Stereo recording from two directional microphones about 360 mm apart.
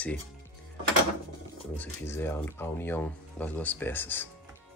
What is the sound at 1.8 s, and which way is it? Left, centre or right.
Speech, centre.